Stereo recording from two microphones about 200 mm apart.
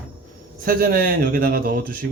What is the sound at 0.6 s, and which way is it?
A man's voice, 50° right (ahead or behind).